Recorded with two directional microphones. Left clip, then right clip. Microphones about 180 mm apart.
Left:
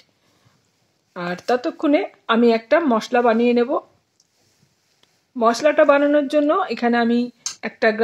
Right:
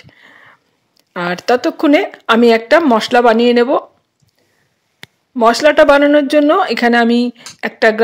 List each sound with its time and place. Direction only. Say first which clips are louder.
1.1 s speech: right 7 dB; 50° right (ahead or behind)
5.0 s speech: right 7 dB; 50° right (ahead or behind)